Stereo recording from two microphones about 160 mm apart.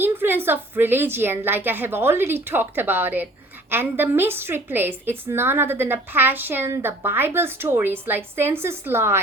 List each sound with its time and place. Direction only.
0.0 s a woman's voice: 15° right (ahead or behind)